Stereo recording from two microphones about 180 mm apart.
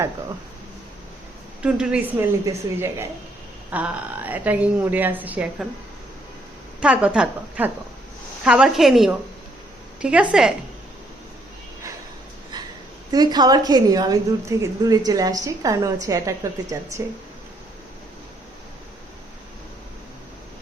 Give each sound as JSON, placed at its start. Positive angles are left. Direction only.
{"t": 1.6, "sound": "a woman's voice", "side_deg": -5}
{"t": 6.7, "sound": "a woman's voice", "side_deg": -5}
{"t": 13.1, "sound": "a woman's voice", "side_deg": -20}